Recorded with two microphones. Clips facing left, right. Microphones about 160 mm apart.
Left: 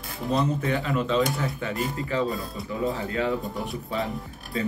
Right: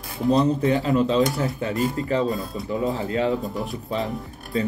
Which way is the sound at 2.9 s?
35° right (ahead or behind).